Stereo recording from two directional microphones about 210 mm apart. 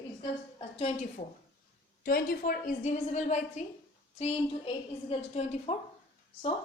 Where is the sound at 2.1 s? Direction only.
45° left (ahead or behind).